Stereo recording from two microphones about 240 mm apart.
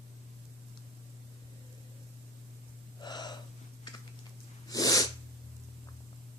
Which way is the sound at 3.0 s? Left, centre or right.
Centre.